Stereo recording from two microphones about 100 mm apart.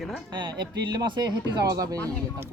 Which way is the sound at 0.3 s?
45° right (ahead or behind).